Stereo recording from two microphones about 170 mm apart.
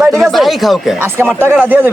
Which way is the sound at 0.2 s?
Centre (ahead or behind).